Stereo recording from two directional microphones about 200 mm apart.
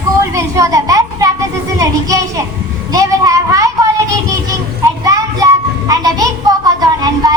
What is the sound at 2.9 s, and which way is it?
Child singing, 20° right (ahead or behind).